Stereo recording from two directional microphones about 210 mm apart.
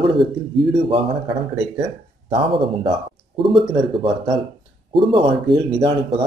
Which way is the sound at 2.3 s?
25° right (ahead or behind).